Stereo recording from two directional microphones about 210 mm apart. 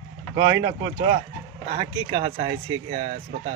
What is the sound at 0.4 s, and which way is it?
Speech, 20° right (ahead or behind).